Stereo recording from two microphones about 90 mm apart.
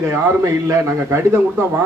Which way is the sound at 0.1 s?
30° right (ahead or behind).